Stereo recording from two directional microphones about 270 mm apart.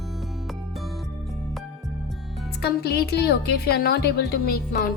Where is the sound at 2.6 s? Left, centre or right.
Left.